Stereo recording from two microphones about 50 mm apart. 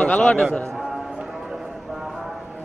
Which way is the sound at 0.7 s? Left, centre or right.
Centre.